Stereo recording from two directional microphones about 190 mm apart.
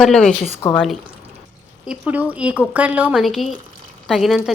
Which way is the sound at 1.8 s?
5° right (ahead or behind).